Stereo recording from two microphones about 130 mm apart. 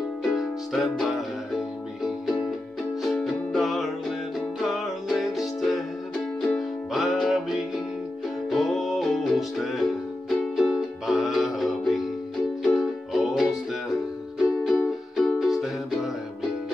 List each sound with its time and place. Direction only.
0.2 s music: centre (ahead or behind)
3.0 s music: centre (ahead or behind)
14.6 s music: centre (ahead or behind)